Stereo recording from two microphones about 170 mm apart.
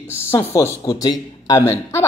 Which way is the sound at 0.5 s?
20° left (ahead or behind).